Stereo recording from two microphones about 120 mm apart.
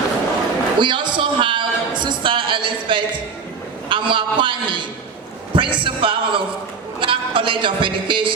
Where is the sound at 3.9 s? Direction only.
45° right (ahead or behind).